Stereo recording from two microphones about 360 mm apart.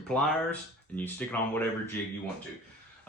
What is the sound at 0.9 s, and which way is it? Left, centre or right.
Speech, centre.